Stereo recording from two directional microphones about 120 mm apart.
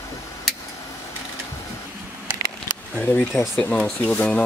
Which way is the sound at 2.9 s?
15° left (ahead or behind).